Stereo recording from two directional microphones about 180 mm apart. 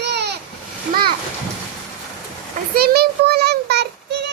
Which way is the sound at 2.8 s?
60° right (ahead or behind).